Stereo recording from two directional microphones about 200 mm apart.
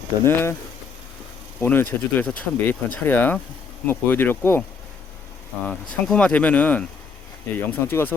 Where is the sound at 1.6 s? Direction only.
10° left (ahead or behind).